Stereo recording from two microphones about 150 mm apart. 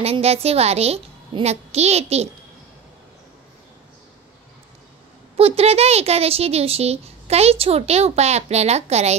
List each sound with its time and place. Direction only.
0.0 s speech: 45° right (ahead or behind)
5.4 s speech: 40° right (ahead or behind)